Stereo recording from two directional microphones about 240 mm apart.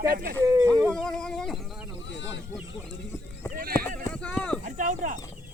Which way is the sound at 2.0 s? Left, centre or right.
Left.